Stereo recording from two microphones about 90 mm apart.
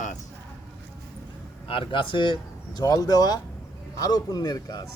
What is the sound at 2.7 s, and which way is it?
A man's voice, 45° left (ahead or behind).